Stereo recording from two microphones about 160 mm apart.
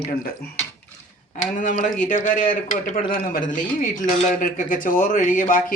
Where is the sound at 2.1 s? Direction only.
55° left (ahead or behind).